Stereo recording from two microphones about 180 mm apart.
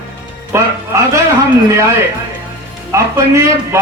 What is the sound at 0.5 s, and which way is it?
Speech, 15° right (ahead or behind).